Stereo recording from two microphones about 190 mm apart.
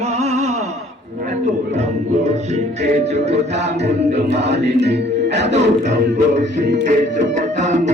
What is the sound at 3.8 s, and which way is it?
Music, 65° right (ahead or behind).